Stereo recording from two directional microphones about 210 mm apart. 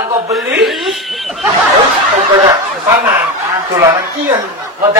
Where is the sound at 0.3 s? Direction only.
Centre (ahead or behind).